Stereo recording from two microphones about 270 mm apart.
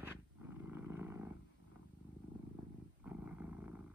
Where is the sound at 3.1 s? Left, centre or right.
Centre.